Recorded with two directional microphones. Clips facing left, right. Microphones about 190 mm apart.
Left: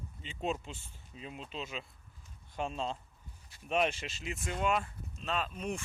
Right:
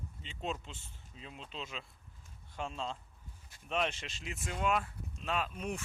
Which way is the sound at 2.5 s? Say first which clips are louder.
Left 4 dB; 15° left (ahead or behind).